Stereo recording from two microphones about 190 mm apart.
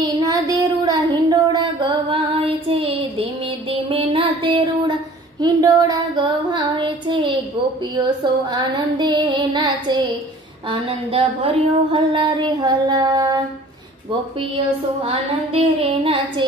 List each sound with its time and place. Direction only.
0.0 s child singing: 20° right (ahead or behind)
5.4 s a sound: 20° right (ahead or behind)
15.0 s a woman's voice: 30° right (ahead or behind)